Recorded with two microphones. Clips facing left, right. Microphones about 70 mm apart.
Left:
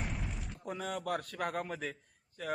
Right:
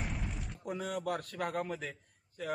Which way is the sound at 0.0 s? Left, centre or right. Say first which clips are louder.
Even; centre.